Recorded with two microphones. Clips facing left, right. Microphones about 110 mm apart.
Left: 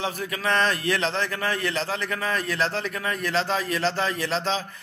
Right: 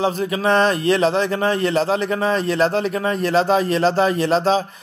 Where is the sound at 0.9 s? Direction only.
20° right (ahead or behind).